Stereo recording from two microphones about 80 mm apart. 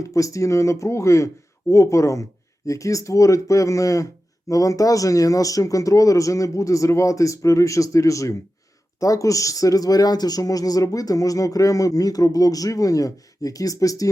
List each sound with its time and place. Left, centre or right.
0.0 s speech: left